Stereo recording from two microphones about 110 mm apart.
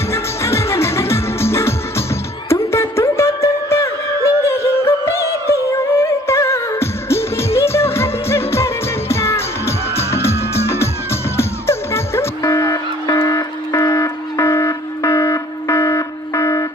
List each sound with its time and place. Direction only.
0.1 s music: 25° left (ahead or behind)